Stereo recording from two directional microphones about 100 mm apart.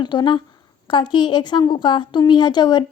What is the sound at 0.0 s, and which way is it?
Speech, 50° left (ahead or behind).